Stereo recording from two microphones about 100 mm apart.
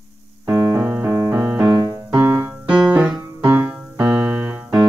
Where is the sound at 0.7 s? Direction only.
20° right (ahead or behind).